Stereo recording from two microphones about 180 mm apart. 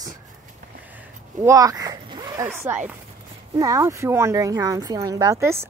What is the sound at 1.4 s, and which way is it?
Speech, 20° right (ahead or behind).